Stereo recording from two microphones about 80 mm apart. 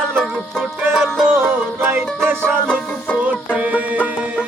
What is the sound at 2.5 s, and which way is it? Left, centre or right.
Music, centre.